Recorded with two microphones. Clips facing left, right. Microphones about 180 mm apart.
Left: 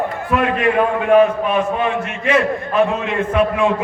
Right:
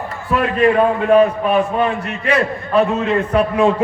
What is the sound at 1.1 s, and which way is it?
A man's voice, 35° right (ahead or behind).